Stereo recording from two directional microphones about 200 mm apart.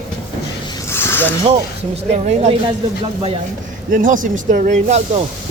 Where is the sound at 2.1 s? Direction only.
35° right (ahead or behind).